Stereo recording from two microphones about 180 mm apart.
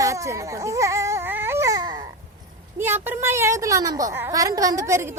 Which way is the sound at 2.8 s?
10° right (ahead or behind).